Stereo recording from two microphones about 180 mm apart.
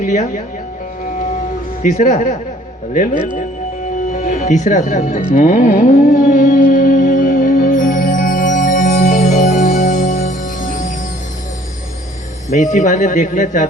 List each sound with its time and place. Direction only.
0.0 s a man's voice: 45° left (ahead or behind)
1.8 s a man's voice: 45° left (ahead or behind)
5.3 s music: 45° left (ahead or behind)
12.5 s a man's voice: 45° left (ahead or behind)